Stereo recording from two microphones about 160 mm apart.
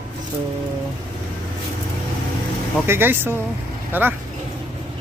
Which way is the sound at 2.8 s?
15° right (ahead or behind).